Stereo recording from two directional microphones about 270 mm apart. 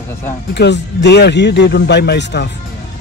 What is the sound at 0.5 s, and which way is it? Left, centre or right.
Speech, left.